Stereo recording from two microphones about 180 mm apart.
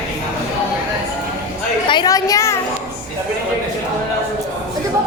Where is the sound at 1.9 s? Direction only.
25° left (ahead or behind).